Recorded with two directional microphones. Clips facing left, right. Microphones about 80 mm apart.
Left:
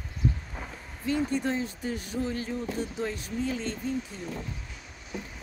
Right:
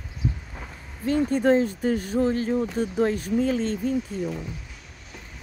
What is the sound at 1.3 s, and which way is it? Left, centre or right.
Speech, right.